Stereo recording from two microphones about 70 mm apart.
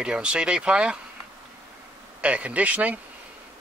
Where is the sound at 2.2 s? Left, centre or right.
Centre.